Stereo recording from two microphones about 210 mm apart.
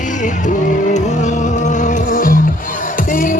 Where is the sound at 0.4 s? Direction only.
35° left (ahead or behind).